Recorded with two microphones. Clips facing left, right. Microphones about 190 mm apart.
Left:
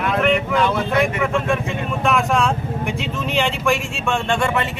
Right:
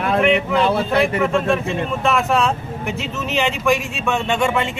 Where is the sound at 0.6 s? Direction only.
30° right (ahead or behind).